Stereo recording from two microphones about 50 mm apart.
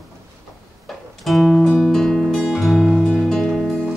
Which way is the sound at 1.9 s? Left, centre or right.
Centre.